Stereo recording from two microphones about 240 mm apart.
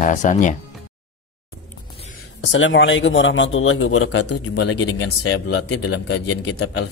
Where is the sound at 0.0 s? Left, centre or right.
Left.